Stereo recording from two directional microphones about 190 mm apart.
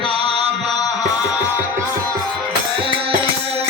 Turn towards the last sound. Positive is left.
turn(degrees=-25)  # may be behind; listen again after turning